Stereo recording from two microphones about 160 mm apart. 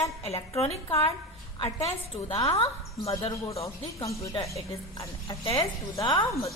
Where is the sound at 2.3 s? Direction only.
25° left (ahead or behind).